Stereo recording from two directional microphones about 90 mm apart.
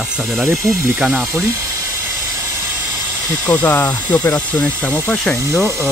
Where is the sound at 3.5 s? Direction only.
15° left (ahead or behind).